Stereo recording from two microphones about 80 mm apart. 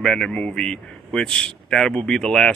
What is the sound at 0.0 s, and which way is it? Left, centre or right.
A man's voice, centre.